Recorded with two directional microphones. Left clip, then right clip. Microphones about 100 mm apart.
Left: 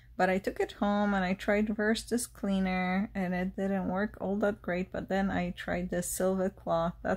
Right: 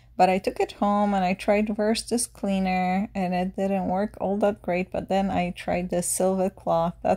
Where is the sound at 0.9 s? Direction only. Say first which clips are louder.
Right 8 dB; 15° right (ahead or behind).